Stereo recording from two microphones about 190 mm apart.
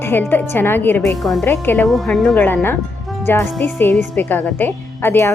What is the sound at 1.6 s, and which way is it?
Speech, 10° left (ahead or behind).